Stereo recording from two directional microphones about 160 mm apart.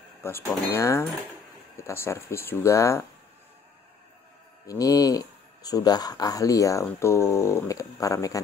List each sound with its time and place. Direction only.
0.2 s speech: 15° left (ahead or behind)
4.6 s speech: 20° left (ahead or behind)